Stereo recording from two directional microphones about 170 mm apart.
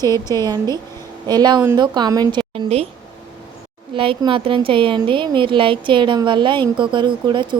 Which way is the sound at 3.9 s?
30° right (ahead or behind).